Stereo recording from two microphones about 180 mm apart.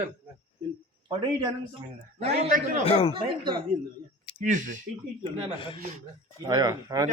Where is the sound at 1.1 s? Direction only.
25° right (ahead or behind).